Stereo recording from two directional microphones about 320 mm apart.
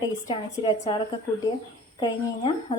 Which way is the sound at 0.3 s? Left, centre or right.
Centre.